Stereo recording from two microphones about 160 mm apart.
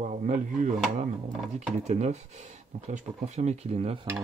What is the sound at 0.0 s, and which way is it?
Speech, 50° right (ahead or behind).